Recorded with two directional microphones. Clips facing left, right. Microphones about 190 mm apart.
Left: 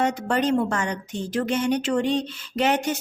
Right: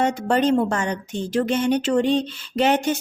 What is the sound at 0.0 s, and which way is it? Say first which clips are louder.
A woman's voice: right 3 dB; 30° right (ahead or behind).